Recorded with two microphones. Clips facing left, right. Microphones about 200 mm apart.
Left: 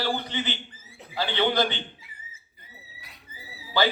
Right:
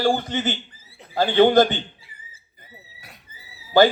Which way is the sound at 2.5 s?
50° right (ahead or behind).